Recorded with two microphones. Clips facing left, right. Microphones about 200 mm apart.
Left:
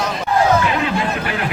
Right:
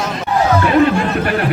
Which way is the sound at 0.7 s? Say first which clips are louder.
Right 7 dB; 45° right (ahead or behind).